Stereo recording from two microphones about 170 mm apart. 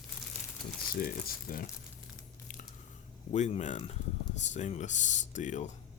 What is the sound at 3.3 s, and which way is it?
Speech, 45° left (ahead or behind).